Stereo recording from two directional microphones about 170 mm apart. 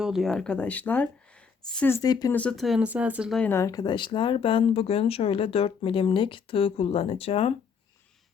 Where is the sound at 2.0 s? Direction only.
20° left (ahead or behind).